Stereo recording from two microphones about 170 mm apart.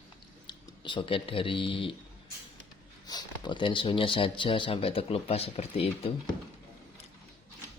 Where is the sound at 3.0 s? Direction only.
25° left (ahead or behind).